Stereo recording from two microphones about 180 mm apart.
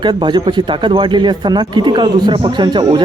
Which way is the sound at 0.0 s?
25° right (ahead or behind).